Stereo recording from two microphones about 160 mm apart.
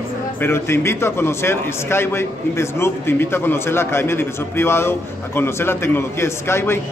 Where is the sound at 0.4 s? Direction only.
15° left (ahead or behind).